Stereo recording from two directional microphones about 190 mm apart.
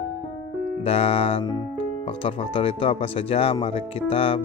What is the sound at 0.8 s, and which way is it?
Speech, 30° left (ahead or behind).